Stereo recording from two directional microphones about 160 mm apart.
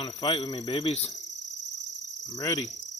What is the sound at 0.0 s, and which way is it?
Speech, 30° left (ahead or behind).